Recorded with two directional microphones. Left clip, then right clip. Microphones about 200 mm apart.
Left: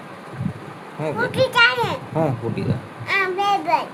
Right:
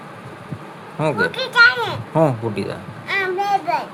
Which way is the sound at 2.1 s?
25° right (ahead or behind).